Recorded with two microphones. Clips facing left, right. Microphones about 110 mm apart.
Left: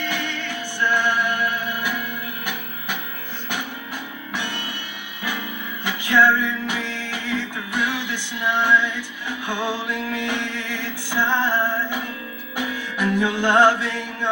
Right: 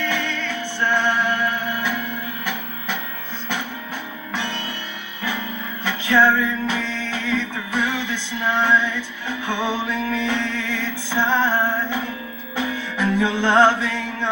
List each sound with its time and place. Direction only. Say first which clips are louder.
0.0 s music: right 3 dB; 15° left (ahead or behind)
5.8 s music: right 1 dB; 15° left (ahead or behind)
11.5 s music: right 1 dB; 15° right (ahead or behind)
12.5 s music: right 2 dB; 15° left (ahead or behind)